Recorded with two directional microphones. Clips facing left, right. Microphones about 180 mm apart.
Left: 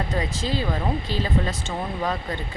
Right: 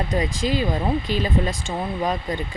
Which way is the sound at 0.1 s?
15° right (ahead or behind).